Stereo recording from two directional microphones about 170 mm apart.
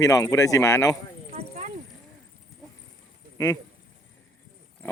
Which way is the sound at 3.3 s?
20° left (ahead or behind).